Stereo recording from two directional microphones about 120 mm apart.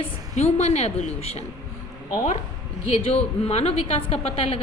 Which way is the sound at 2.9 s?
55° left (ahead or behind).